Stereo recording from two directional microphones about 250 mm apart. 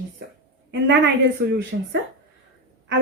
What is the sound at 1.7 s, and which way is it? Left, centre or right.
Speech, right.